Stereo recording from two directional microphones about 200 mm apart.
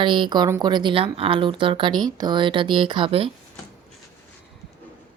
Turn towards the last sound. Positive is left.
turn(degrees=-25)  # may be behind; listen again after turning